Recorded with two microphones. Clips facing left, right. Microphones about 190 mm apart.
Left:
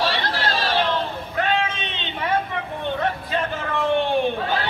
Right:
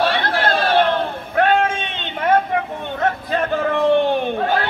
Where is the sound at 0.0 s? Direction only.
55° right (ahead or behind).